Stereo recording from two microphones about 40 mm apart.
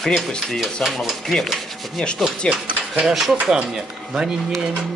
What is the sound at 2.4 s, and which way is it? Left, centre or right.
Speech, left.